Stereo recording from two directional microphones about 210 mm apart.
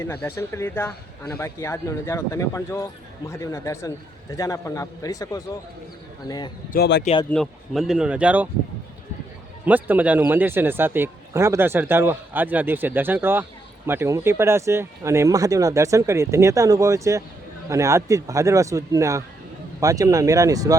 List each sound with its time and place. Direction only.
0.0 s speech: 10° left (ahead or behind)
6.7 s a man's voice: 55° left (ahead or behind)
7.0 s speech: 25° left (ahead or behind)
7.3 s speech: centre (ahead or behind)
9.6 s speech: 10° right (ahead or behind)